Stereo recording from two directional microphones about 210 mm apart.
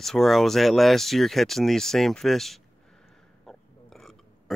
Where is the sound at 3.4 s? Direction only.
Centre (ahead or behind).